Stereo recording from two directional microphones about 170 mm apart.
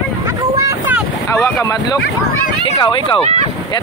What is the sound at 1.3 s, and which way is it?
Speech, 20° left (ahead or behind).